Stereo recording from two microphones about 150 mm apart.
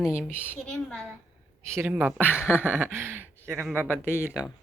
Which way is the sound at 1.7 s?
10° right (ahead or behind).